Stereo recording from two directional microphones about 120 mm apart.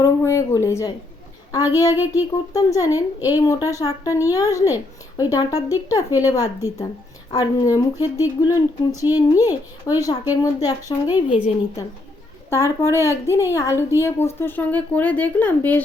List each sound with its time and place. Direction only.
0.0 s a sound: 20° left (ahead or behind)
1.5 s speech: 30° left (ahead or behind)
12.5 s speech: 20° left (ahead or behind)